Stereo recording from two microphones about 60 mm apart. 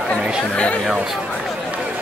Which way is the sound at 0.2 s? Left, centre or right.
Centre.